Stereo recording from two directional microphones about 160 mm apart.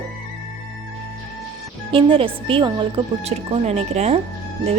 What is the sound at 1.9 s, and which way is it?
A woman's voice, 35° right (ahead or behind).